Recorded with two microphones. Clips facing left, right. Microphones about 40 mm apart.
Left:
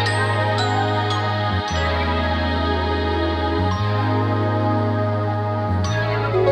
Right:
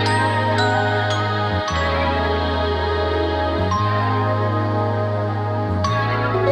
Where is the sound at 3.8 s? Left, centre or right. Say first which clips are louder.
Right 2 dB; centre.